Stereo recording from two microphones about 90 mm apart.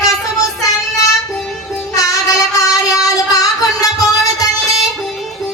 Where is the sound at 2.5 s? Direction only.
40° left (ahead or behind).